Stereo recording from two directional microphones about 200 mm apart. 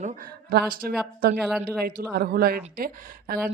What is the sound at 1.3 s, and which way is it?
Speech, centre (ahead or behind).